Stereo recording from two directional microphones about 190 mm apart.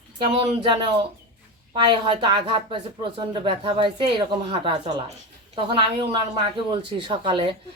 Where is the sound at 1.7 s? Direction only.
25° right (ahead or behind).